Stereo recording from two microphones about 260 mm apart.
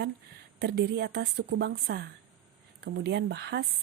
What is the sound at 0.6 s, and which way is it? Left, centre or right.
Speech, right.